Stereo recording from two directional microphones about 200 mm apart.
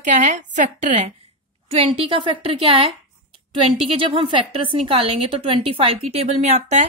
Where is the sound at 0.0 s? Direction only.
35° right (ahead or behind).